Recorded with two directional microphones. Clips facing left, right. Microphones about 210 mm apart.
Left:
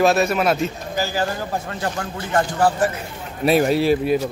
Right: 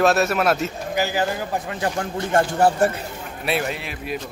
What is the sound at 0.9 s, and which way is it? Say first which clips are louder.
A man's voice: right 1 dB; 15° right (ahead or behind).